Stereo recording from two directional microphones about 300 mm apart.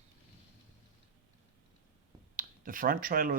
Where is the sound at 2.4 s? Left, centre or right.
Right.